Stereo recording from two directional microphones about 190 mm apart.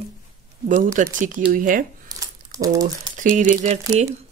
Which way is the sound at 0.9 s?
45° right (ahead or behind).